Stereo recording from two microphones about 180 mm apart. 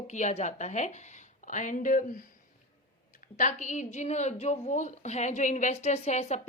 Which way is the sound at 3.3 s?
40° left (ahead or behind).